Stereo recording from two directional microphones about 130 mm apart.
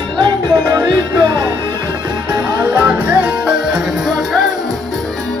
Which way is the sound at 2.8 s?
10° right (ahead or behind).